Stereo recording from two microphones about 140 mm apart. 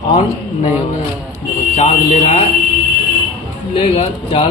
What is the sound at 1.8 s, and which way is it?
Speech, 50° left (ahead or behind).